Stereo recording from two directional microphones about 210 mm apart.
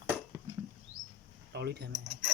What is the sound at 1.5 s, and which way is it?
Mechanisms, 50° right (ahead or behind).